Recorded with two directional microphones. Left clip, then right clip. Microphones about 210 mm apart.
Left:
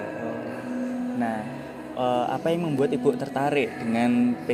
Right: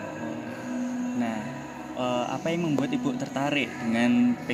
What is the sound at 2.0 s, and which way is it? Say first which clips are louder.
A man's voice: left 4 dB; 5° left (ahead or behind).